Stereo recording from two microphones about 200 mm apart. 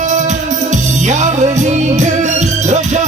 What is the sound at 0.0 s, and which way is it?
Music, 35° right (ahead or behind).